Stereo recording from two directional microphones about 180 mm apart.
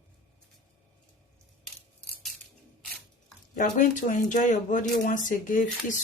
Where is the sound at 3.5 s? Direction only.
45° left (ahead or behind).